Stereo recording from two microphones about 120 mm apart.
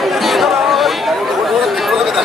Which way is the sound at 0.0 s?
Centre (ahead or behind).